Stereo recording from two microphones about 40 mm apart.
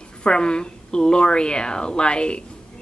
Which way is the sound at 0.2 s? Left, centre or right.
Left.